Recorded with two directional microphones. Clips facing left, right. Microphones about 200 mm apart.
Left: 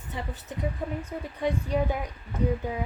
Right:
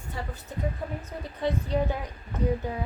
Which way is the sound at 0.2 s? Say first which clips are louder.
Left 1 dB; 20° left (ahead or behind).